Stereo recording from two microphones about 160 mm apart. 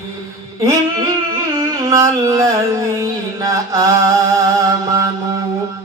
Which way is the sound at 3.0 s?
20° right (ahead or behind).